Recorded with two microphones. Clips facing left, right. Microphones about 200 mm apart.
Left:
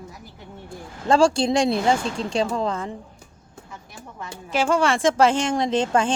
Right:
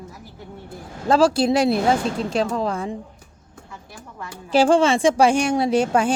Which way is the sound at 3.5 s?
20° left (ahead or behind).